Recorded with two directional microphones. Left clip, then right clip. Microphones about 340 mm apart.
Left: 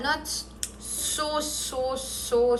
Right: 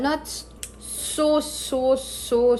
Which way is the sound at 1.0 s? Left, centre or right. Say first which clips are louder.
Right 7 dB; right.